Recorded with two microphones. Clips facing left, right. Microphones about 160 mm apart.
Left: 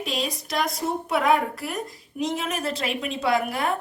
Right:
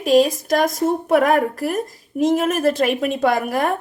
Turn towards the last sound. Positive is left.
turn(degrees=-50)  # may be behind; listen again after turning